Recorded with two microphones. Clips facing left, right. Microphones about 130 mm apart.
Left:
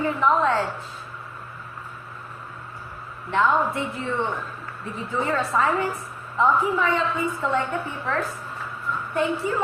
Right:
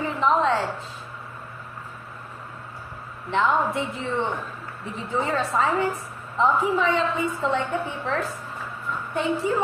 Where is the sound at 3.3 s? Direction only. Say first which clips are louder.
Left 1 dB; 20° right (ahead or behind).